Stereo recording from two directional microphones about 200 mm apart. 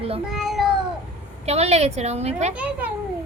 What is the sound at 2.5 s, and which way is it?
Speech, 5° right (ahead or behind).